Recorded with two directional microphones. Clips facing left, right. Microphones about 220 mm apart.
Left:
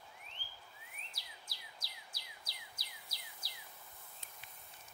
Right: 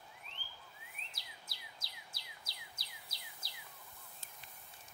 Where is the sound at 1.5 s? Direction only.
25° right (ahead or behind).